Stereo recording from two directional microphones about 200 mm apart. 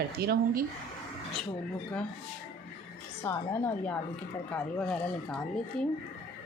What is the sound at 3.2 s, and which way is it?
Speech, 15° left (ahead or behind).